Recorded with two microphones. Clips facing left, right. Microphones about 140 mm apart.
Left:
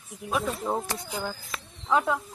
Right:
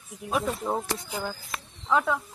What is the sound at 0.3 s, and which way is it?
Speech, centre (ahead or behind).